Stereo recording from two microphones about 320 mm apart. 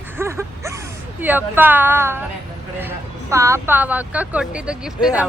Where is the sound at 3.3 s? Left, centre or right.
Centre.